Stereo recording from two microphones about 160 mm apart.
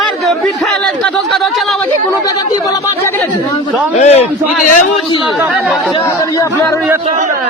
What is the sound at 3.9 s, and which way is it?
Speech, 45° left (ahead or behind).